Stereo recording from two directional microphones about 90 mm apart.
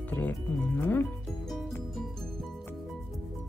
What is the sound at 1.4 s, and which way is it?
Music, 5° left (ahead or behind).